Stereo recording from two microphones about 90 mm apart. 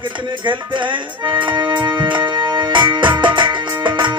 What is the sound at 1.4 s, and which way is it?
Music, 65° right (ahead or behind).